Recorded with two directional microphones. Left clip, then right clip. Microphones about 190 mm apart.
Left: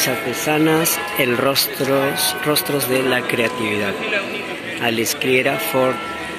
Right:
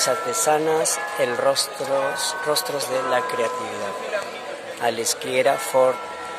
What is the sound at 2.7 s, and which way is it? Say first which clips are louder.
Speech: left 4 dB; 10° right (ahead or behind).